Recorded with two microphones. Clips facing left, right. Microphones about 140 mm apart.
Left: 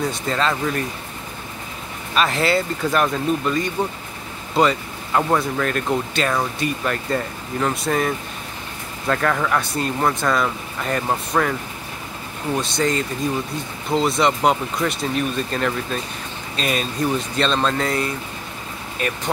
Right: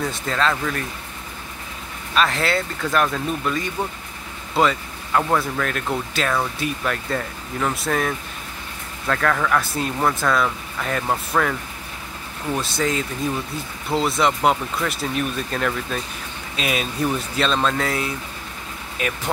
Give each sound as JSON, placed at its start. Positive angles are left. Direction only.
{"t": 0.0, "sound": "speech", "side_deg": 0}
{"t": 2.1, "sound": "speech", "side_deg": 0}
{"t": 12.5, "sound": "speech", "side_deg": -5}